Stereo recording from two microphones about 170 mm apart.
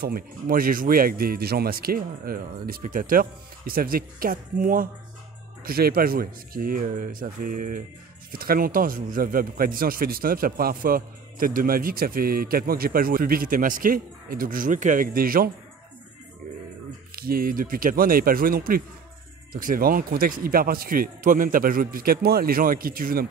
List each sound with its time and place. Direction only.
0.0 s speech: 60° right (ahead or behind)
17.1 s speech: 60° right (ahead or behind)